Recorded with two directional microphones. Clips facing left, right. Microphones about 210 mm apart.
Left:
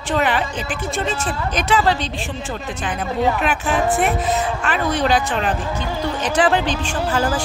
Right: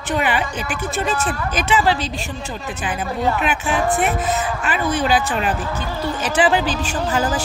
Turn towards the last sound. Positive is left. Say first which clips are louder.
# even
turn(degrees=-5)  # may be behind; listen again after turning